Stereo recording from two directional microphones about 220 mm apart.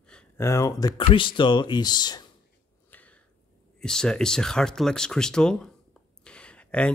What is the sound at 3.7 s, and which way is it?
Speech, 5° left (ahead or behind).